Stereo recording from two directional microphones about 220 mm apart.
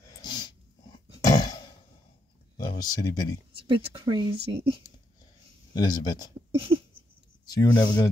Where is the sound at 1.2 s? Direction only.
20° left (ahead or behind).